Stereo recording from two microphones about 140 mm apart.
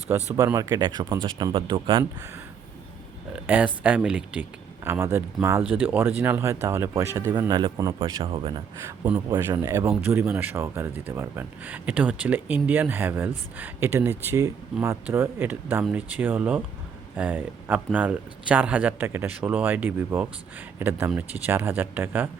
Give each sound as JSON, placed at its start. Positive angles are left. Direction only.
{"t": 0.3, "sound": "speech", "side_deg": -25}
{"t": 3.4, "sound": "speech", "side_deg": -10}
{"t": 7.3, "sound": "speech", "side_deg": -30}
{"t": 8.2, "sound": "speech", "side_deg": -40}
{"t": 9.4, "sound": "speech", "side_deg": -20}